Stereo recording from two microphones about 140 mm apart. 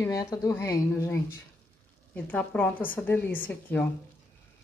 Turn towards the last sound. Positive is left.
turn(degrees=10)  # may be behind; listen again after turning